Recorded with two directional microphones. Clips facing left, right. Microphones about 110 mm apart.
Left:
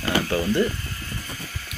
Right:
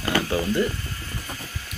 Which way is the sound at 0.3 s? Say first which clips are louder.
Left 3 dB; 10° right (ahead or behind).